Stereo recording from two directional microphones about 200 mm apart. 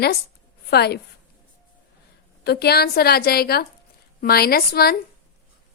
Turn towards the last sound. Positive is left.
turn(degrees=50)  # may be behind; listen again after turning